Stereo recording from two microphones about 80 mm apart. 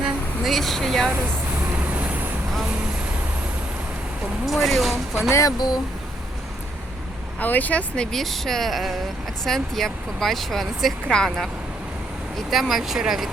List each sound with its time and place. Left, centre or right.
0.4 s speech: centre
1.6 s vehicle: right
4.4 s speech: centre
5.3 s speech: left
5.5 s speech: left
7.3 s speech: left
8.1 s speech: centre
12.5 s speech: centre